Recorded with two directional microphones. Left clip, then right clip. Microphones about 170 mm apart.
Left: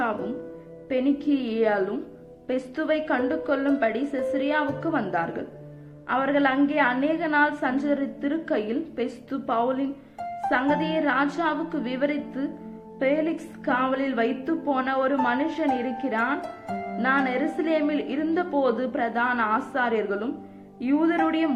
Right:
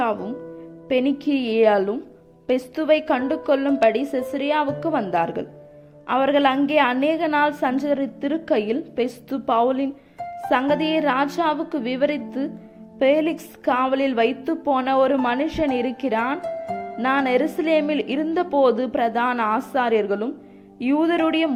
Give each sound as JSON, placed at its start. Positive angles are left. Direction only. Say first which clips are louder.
{"t": 0.9, "sound": "a woman's voice", "louder": "right 3 dB", "side_deg": -40}
{"t": 16.4, "sound": "harp", "louder": "right 5 dB", "side_deg": 0}
{"t": 17.0, "sound": "a woman's voice", "louder": "right 4 dB", "side_deg": -45}